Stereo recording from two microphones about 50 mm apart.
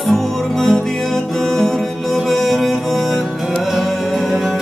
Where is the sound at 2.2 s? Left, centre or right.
Centre.